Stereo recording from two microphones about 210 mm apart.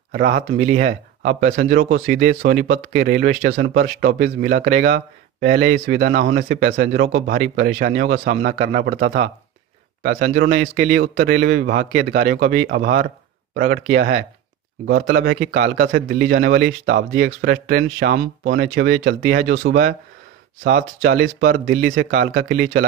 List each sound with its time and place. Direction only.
0.1 s speech: 45° right (ahead or behind)